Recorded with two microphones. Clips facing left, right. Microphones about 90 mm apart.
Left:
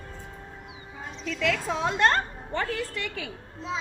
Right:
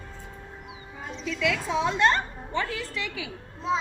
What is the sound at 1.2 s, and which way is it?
A woman's voice, 45° left (ahead or behind).